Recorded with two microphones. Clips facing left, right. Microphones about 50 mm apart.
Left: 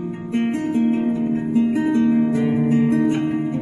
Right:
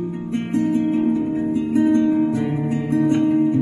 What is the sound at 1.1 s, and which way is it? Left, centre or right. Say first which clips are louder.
Music: left 1 dB; centre.